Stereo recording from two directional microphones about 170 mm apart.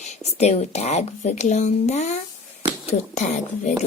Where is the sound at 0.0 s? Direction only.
40° left (ahead or behind).